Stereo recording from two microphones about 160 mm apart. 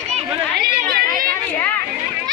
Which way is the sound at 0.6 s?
65° right (ahead or behind).